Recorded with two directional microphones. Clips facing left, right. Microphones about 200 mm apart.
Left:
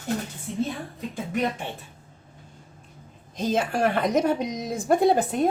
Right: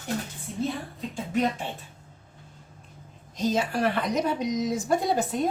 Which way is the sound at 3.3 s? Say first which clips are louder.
Left 1 dB; 55° left (ahead or behind).